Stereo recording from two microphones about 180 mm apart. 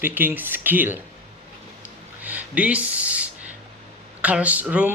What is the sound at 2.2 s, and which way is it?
Speech, 10° right (ahead or behind).